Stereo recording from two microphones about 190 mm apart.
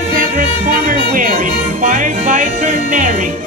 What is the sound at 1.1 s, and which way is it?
Music, 45° right (ahead or behind).